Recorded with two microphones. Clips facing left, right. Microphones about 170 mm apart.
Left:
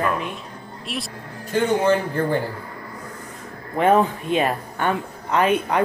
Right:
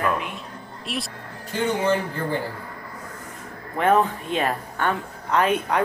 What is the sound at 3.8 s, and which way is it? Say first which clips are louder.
A woman's voice: left 2 dB; 15° left (ahead or behind).